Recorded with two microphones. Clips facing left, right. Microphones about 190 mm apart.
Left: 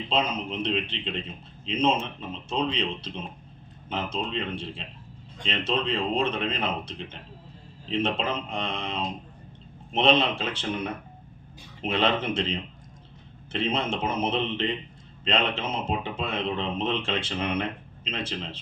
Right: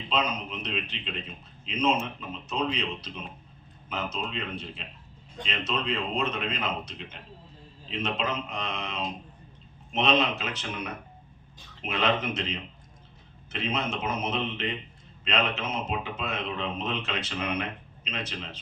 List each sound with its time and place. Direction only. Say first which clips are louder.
0.1 s speech: left 2 dB; 30° left (ahead or behind)